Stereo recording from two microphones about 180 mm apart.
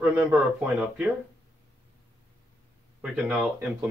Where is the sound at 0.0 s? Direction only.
10° right (ahead or behind).